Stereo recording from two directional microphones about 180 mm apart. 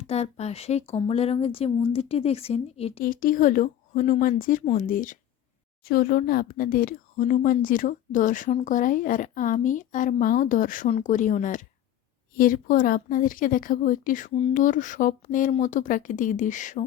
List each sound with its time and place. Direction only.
0.0 s speech: 35° left (ahead or behind)
3.0 s speech: 50° left (ahead or behind)